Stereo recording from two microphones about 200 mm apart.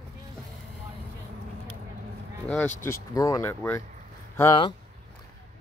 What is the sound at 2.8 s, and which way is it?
Speech, 15° left (ahead or behind).